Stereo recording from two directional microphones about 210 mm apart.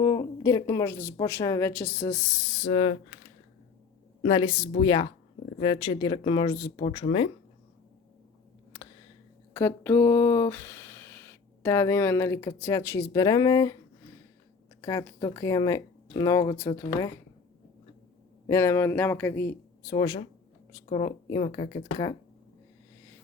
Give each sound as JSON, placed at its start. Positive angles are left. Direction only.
{"t": 0.4, "sound": "speech", "side_deg": 15}
{"t": 2.6, "sound": "speech", "side_deg": 30}
{"t": 4.2, "sound": "speech", "side_deg": 25}
{"t": 9.5, "sound": "speech", "side_deg": 10}
{"t": 14.8, "sound": "speech", "side_deg": 15}
{"t": 18.4, "sound": "speech", "side_deg": 15}